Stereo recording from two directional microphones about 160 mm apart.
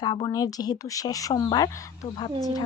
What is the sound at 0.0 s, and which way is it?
Speech, 25° left (ahead or behind).